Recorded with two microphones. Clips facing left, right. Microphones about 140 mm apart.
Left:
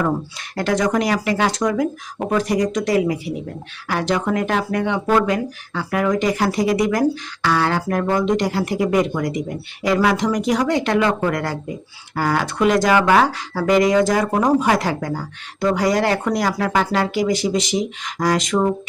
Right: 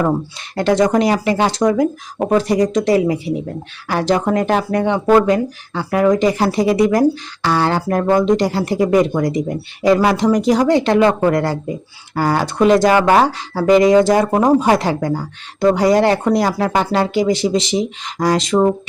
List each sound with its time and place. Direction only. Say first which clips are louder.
0.5 s speech: right 5 dB; 25° right (ahead or behind)